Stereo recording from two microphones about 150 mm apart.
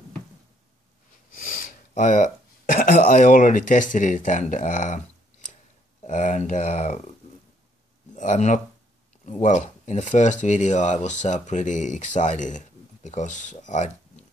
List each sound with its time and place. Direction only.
1.5 s speech: 60° left (ahead or behind)
6.0 s speech: 55° left (ahead or behind)
8.1 s a sound: 55° left (ahead or behind)
9.2 s speech: 55° left (ahead or behind)